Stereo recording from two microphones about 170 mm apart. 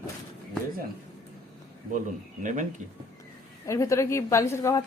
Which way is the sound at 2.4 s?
45° right (ahead or behind).